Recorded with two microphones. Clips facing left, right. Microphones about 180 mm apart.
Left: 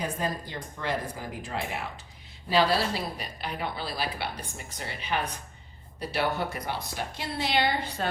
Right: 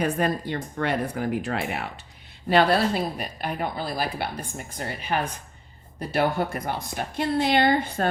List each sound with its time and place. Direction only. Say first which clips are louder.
0.0 s speech: right 7 dB; 65° right (ahead or behind)
2.5 s a woman's voice: right 5 dB; 55° right (ahead or behind)